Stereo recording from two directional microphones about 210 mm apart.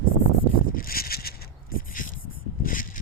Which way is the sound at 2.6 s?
40° left (ahead or behind).